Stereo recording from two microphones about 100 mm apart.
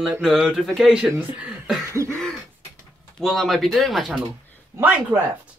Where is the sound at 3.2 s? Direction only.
Centre (ahead or behind).